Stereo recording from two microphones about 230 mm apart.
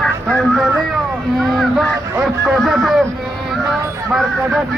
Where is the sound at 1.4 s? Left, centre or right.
Centre.